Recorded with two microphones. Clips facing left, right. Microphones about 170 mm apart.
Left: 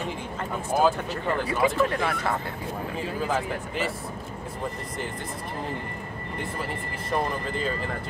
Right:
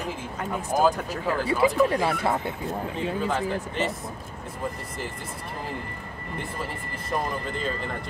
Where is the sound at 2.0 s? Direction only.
25° right (ahead or behind).